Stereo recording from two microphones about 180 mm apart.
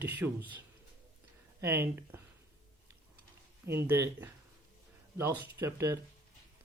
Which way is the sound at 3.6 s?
15° right (ahead or behind).